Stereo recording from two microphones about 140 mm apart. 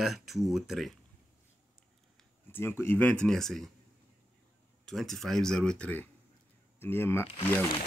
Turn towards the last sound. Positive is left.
turn(degrees=15)  # may be behind; listen again after turning